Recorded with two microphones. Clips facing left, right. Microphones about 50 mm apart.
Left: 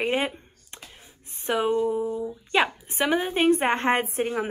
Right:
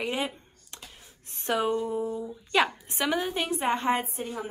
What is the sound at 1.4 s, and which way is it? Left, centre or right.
Speech, centre.